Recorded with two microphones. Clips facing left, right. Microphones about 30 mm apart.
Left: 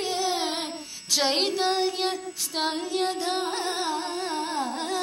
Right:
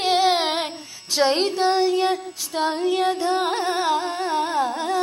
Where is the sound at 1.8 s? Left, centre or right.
Right.